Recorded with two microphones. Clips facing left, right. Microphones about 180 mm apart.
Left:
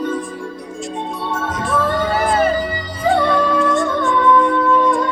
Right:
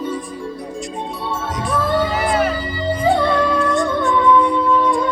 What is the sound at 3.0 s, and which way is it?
Music, 15° right (ahead or behind).